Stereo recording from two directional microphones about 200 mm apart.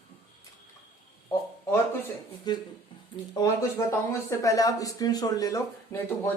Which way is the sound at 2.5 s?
20° left (ahead or behind).